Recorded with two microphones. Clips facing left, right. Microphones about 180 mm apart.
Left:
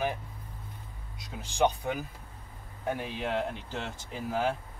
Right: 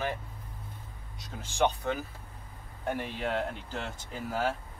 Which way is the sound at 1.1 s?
15° left (ahead or behind).